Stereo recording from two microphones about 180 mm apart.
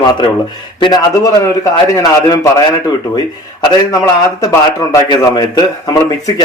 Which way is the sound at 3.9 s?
20° left (ahead or behind).